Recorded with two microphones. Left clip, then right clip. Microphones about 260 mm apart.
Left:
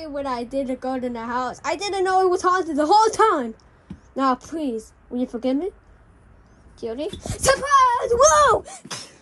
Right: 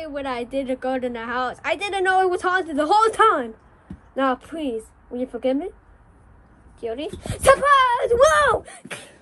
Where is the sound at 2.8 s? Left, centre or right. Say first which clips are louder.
Even; centre.